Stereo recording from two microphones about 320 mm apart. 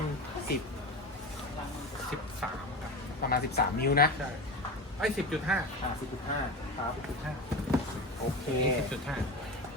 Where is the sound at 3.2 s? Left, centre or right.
Left.